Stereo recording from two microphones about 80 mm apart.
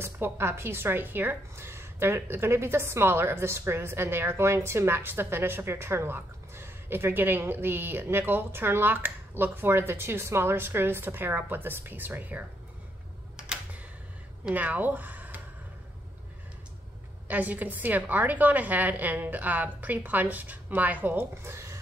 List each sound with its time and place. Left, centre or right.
0.0 s speech: right
13.4 s computer keyboard: centre
14.5 s speech: right
17.3 s speech: centre